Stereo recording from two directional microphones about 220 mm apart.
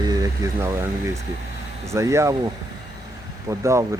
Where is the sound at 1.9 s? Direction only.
15° right (ahead or behind).